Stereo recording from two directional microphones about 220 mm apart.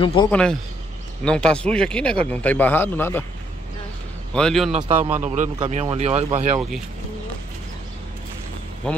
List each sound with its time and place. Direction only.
0.0 s speech: 25° left (ahead or behind)
0.3 s speech: 5° left (ahead or behind)
4.3 s speech: 5° left (ahead or behind)
4.7 s a man's voice: 25° right (ahead or behind)
8.8 s speech: 5° left (ahead or behind)